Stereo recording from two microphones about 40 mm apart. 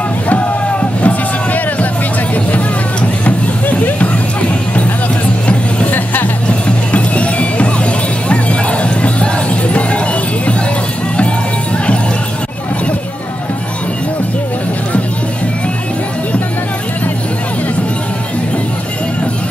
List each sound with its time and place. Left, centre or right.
0.3 s music: left
5.9 s music: left
6.9 s music: left